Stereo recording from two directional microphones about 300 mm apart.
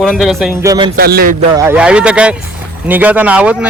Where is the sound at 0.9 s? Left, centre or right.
Right.